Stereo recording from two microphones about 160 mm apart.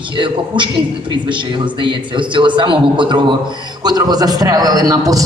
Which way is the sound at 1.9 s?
30° right (ahead or behind).